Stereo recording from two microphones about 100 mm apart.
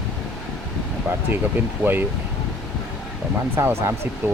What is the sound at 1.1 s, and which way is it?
Speech, 15° right (ahead or behind).